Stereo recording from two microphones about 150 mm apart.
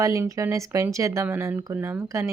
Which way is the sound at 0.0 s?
20° right (ahead or behind).